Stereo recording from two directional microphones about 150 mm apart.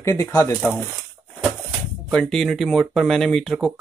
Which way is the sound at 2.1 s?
5° left (ahead or behind).